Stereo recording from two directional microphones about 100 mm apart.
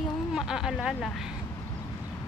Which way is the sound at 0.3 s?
5° right (ahead or behind).